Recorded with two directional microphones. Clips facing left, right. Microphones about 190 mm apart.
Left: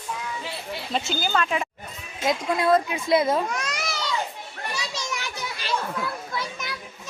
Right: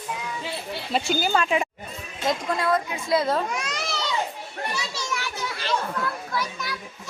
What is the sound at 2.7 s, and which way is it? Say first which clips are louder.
Speech: left 4 dB; 25° left (ahead or behind).